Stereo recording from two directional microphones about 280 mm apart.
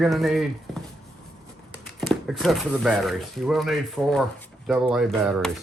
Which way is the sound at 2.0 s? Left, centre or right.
Centre.